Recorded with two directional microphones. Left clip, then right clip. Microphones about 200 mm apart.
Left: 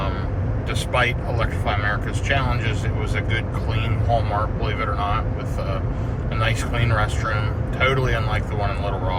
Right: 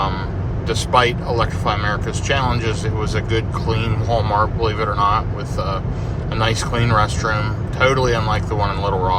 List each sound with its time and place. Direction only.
0.7 s speech: 25° right (ahead or behind)